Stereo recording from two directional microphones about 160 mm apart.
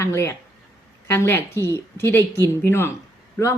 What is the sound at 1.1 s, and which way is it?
Speech, 15° left (ahead or behind).